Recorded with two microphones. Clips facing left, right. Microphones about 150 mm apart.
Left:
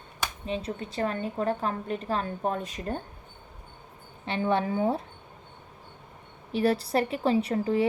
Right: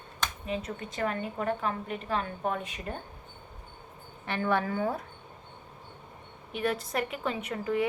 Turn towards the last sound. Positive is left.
turn(degrees=30)  # may be behind; listen again after turning